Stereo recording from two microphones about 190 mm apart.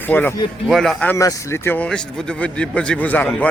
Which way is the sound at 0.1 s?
10° left (ahead or behind).